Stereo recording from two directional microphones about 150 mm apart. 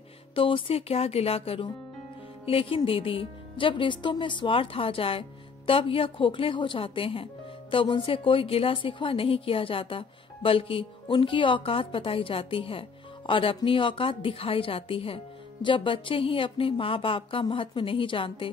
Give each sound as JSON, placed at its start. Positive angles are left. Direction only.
{"t": 0.3, "sound": "a woman's voice", "side_deg": 35}